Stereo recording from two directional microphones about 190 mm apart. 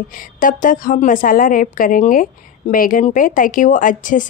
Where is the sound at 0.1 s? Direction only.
45° left (ahead or behind).